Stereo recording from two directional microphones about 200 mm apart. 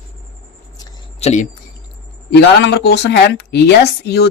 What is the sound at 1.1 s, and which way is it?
Speech, 35° left (ahead or behind).